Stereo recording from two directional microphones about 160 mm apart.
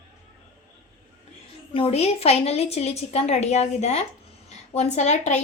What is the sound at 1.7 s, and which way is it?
A woman's voice, 35° left (ahead or behind).